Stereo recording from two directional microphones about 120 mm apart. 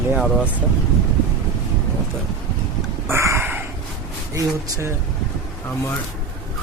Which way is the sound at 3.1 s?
20° right (ahead or behind).